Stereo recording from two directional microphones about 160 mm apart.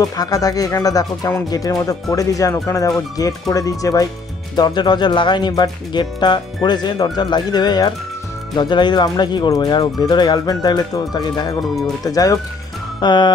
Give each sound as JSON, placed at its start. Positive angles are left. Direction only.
{"t": 0.0, "sound": "speech", "side_deg": 20}